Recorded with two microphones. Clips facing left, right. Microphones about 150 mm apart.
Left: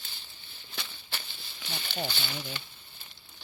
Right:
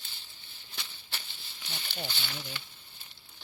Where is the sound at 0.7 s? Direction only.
80° left.